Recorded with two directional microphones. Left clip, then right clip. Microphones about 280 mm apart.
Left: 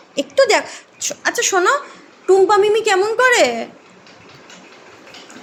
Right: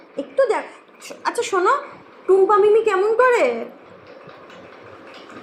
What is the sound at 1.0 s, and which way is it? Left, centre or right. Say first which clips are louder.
Speech: left 5 dB; left.